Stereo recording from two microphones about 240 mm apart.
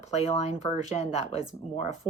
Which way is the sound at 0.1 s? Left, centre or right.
Left.